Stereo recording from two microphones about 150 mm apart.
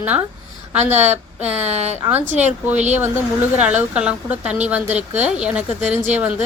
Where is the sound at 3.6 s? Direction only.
10° right (ahead or behind).